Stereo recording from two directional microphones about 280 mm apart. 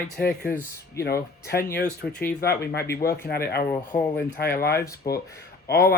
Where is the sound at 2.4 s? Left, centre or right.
Left.